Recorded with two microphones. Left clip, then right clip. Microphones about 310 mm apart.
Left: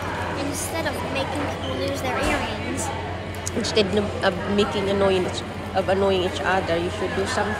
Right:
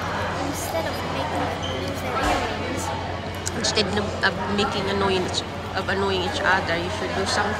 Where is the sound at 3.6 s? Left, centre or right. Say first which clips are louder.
Left 1 dB; centre.